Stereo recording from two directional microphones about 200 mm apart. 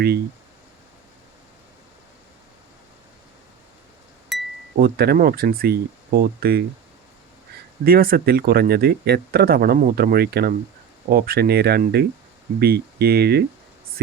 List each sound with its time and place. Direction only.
4.3 s a sound: centre (ahead or behind)
4.8 s speech: 50° right (ahead or behind)
7.9 s speech: 50° right (ahead or behind)